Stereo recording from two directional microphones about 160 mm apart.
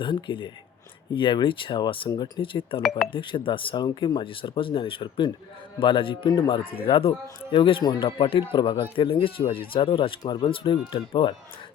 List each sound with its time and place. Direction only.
0.0 s speech: 30° left (ahead or behind)